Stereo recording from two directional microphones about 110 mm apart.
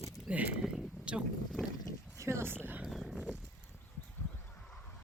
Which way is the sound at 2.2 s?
25° right (ahead or behind).